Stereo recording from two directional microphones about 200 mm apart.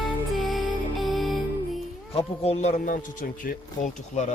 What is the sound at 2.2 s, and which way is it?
Speech, 30° left (ahead or behind).